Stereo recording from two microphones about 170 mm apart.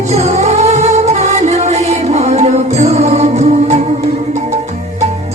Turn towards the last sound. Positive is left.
turn(degrees=-40)  # may be behind; listen again after turning